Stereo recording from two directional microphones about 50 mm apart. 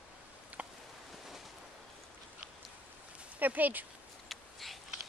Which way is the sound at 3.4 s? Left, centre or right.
Right.